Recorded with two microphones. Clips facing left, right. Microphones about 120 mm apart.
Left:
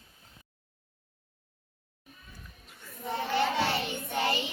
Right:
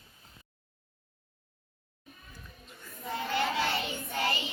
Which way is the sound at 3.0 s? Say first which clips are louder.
Left 3 dB; 20° left (ahead or behind).